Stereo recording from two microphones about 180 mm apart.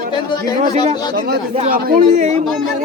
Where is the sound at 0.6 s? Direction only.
40° right (ahead or behind).